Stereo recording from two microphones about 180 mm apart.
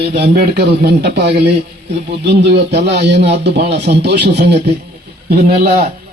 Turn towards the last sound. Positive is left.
turn(degrees=-55)  # may be behind; listen again after turning